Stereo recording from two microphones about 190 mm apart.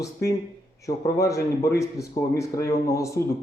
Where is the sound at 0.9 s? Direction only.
15° left (ahead or behind).